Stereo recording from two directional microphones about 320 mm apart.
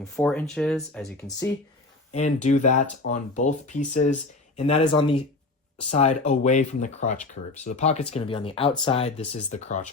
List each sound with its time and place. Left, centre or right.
0.0 s speech: centre
2.1 s speech: left